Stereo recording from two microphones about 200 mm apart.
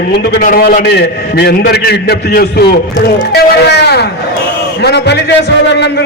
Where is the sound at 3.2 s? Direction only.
55° left (ahead or behind).